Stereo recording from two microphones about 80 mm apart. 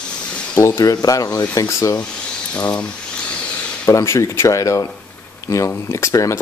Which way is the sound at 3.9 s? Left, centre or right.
Left.